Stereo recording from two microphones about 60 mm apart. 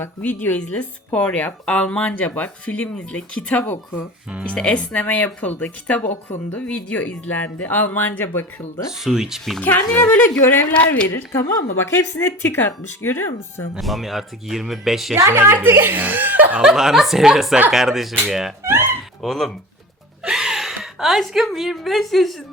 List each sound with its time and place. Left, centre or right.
0.2 s speech: left
8.9 s speech: centre
9.6 s a woman's voice: left
11.3 s speech: left
11.8 s speech: left
12.4 s speech: left
13.7 s speech: centre
15.3 s a woman's voice: right
16.6 s speech: centre
18.6 s a woman's voice: right
19.2 s speech: centre
20.2 s a woman's voice: centre